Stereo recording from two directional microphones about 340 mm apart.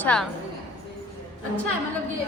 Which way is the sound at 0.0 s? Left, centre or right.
Centre.